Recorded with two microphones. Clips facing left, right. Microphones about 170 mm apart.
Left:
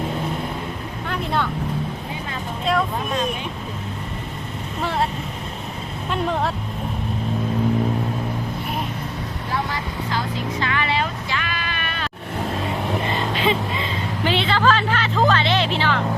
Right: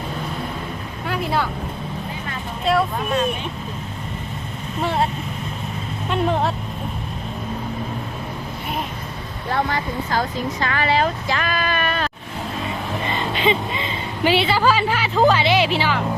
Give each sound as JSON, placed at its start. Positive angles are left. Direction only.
{"t": 1.0, "sound": "vehicle", "side_deg": -5}
{"t": 2.6, "sound": "vehicle", "side_deg": -5}
{"t": 4.8, "sound": "vehicle", "side_deg": 0}
{"t": 9.5, "sound": "speech", "side_deg": -55}
{"t": 13.1, "sound": "vehicle", "side_deg": 0}
{"t": 14.3, "sound": "a woman's voice", "side_deg": -10}